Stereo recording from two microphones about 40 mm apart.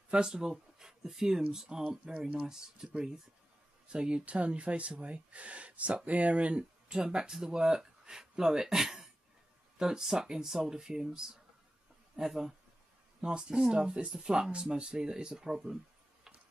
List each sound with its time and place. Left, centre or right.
0.1 s speech: centre
13.2 s speech: right